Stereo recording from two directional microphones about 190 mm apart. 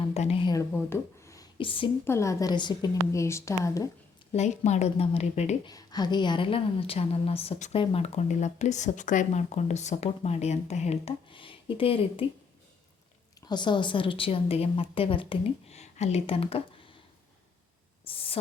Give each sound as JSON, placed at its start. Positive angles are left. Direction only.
{"t": 0.0, "sound": "a woman's voice", "side_deg": 30}
{"t": 0.7, "sound": "speech", "side_deg": 10}
{"t": 1.5, "sound": "a woman's voice", "side_deg": 25}
{"t": 2.0, "sound": "a woman's voice", "side_deg": 15}
{"t": 4.4, "sound": "a woman's voice", "side_deg": 35}
{"t": 5.6, "sound": "a woman's voice", "side_deg": 20}
{"t": 13.5, "sound": "a woman's voice", "side_deg": 25}
{"t": 18.0, "sound": "a sound", "side_deg": 30}